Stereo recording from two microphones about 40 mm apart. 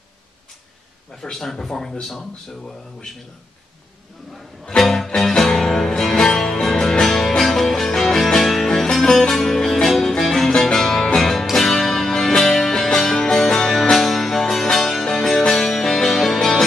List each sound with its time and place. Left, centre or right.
1.3 s speech: centre
4.6 s music: centre
9.3 s music: centre